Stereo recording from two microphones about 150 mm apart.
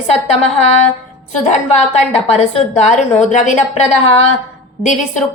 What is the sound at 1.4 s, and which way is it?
A woman's voice, 45° left (ahead or behind).